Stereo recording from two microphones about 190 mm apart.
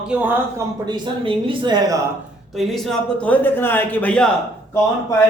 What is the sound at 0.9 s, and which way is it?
Speech, 25° right (ahead or behind).